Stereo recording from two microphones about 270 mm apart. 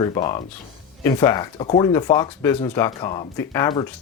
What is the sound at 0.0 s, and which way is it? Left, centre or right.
Speech, centre.